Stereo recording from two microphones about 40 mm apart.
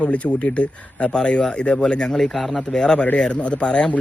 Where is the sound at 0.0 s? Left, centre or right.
Left.